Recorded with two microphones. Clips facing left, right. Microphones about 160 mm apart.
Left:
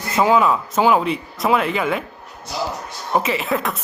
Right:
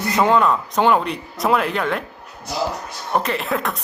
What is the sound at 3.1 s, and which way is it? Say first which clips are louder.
Speech: left 1 dB; 5° left (ahead or behind).